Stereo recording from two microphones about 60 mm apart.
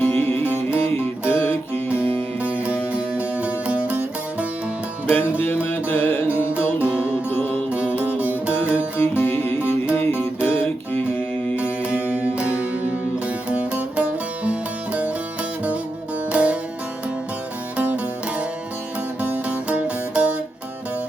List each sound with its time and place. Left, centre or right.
0.0 s music: left
2.4 s music: right
5.0 s music: left
6.8 s music: right
9.0 s music: left
12.1 s music: centre
16.3 s music: right
17.7 s music: right
19.5 s music: right